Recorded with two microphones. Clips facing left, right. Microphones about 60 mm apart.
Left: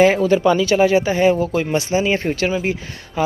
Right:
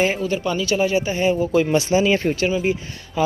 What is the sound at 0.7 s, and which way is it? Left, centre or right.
Speech, left.